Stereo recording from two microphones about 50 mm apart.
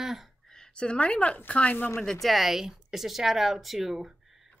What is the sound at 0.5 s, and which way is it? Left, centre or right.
A woman's voice, centre.